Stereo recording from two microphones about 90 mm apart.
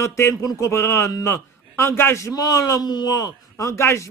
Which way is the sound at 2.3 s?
40° left (ahead or behind).